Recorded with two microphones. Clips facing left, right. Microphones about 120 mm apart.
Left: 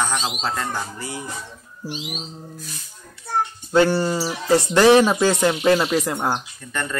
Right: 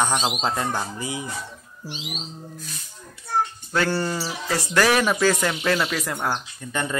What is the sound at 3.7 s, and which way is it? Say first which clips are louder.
Speech: left 8 dB; 20° left (ahead or behind).